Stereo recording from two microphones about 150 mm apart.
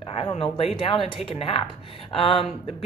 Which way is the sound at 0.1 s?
40° left (ahead or behind).